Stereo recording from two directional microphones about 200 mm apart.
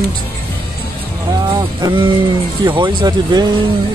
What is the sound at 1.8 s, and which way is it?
Speech, 25° right (ahead or behind).